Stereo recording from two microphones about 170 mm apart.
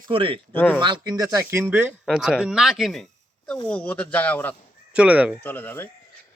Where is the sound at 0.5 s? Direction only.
10° left (ahead or behind).